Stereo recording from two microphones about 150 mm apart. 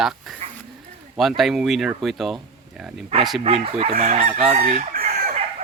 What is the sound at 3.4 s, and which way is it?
Chicken, 40° right (ahead or behind).